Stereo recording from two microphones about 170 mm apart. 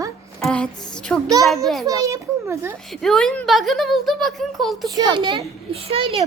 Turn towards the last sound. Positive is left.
turn(degrees=-35)  # may be behind; listen again after turning